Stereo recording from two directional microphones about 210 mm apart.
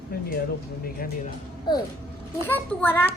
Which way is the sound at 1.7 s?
20° left (ahead or behind).